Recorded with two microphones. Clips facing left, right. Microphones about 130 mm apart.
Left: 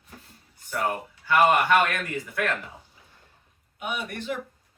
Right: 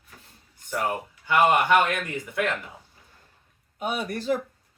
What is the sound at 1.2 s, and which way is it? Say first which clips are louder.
A man's voice: even; 20° right (ahead or behind).